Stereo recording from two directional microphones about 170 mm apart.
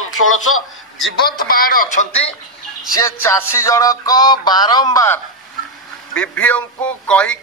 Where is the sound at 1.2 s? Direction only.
60° left (ahead or behind).